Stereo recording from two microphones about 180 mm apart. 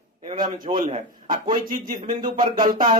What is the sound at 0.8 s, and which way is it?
Speech, 40° right (ahead or behind).